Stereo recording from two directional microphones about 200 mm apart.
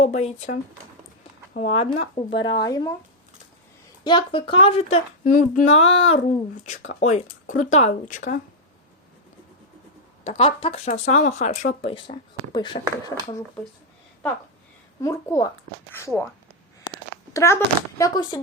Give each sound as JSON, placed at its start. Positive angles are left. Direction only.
{"t": 0.0, "sound": "speech", "side_deg": 30}
{"t": 4.0, "sound": "speech", "side_deg": 25}
{"t": 5.2, "sound": "speech", "side_deg": 45}
{"t": 5.8, "sound": "speech", "side_deg": 30}
{"t": 10.2, "sound": "speech", "side_deg": 30}
{"t": 15.0, "sound": "a woman's voice", "side_deg": 15}
{"t": 17.3, "sound": "a woman's voice", "side_deg": 15}